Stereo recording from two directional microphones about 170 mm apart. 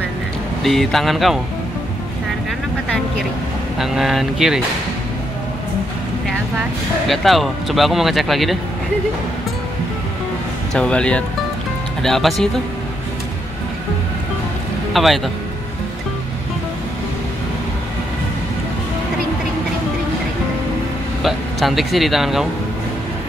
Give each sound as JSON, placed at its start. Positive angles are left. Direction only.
{"t": 0.7, "sound": "speech", "side_deg": 0}
{"t": 3.7, "sound": "speech", "side_deg": 0}
{"t": 7.1, "sound": "speech", "side_deg": 0}
{"t": 10.7, "sound": "speech", "side_deg": 5}
{"t": 15.0, "sound": "speech", "side_deg": 0}
{"t": 21.2, "sound": "speech", "side_deg": 0}